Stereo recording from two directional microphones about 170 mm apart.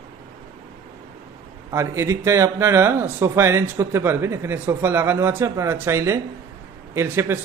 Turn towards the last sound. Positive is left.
turn(degrees=-15)  # may be behind; listen again after turning